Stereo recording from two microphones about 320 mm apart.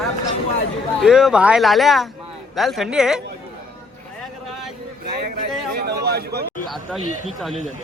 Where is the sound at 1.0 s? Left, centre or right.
Centre.